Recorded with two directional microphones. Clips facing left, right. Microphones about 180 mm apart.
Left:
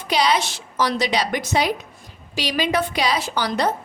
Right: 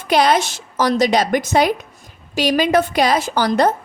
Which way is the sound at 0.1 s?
50° right (ahead or behind).